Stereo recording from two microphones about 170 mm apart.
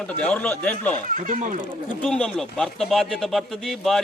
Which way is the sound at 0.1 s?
10° left (ahead or behind).